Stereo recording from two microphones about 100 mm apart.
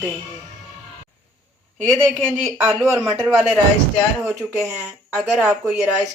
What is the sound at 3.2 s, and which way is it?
Speech, 15° right (ahead or behind).